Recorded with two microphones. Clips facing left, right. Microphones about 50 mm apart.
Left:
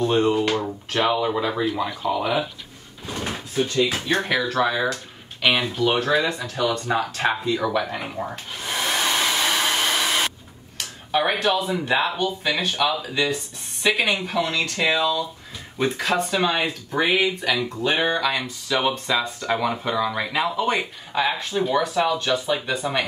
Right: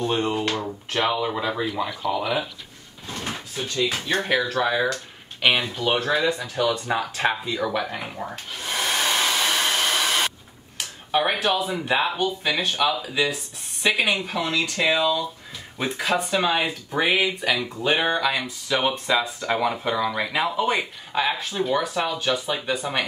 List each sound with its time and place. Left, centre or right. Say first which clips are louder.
0.0 s speech: left 4 dB; centre
0.5 s speech: left 3 dB; centre
3.1 s drawer open or close: left 2 dB; centre
3.7 s speech: even; centre
7.9 s hair dryer: left 2 dB; centre
10.8 s speech: even; centre